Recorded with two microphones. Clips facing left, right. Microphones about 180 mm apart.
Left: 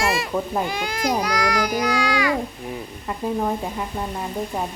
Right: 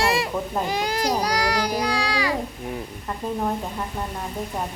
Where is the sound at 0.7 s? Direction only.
35° right (ahead or behind).